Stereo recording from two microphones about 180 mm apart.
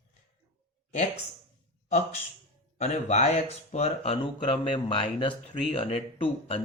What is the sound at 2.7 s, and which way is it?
Speech, 35° left (ahead or behind).